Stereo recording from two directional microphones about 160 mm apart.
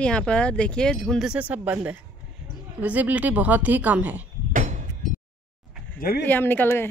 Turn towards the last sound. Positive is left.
turn(degrees=15)  # may be behind; listen again after turning